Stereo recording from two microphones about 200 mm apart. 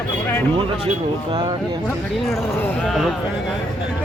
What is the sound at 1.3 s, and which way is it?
Speech, 25° right (ahead or behind).